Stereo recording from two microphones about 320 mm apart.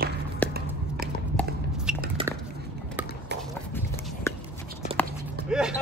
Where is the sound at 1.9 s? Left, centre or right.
Centre.